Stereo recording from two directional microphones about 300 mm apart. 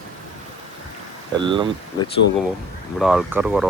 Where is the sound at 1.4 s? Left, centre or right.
Centre.